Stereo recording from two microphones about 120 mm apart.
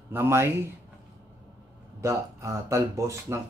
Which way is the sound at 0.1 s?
20° right (ahead or behind).